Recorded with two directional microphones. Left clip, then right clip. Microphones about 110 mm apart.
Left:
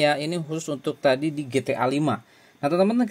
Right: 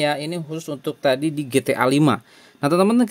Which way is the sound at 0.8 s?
15° right (ahead or behind).